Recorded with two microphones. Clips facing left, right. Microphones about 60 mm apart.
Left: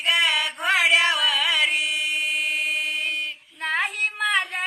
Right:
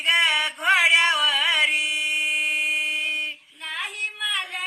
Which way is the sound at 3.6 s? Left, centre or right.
Left.